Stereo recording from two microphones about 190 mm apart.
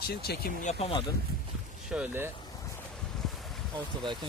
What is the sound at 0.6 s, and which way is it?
Speech, 35° left (ahead or behind).